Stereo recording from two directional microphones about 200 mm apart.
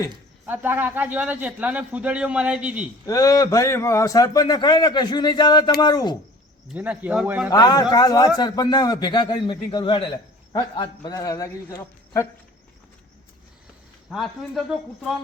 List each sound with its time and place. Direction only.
0.4 s a man's voice: 10° right (ahead or behind)
3.1 s a man's voice: 15° left (ahead or behind)
6.7 s speech: 5° right (ahead or behind)
7.5 s a man's voice: 20° left (ahead or behind)
14.1 s speech: centre (ahead or behind)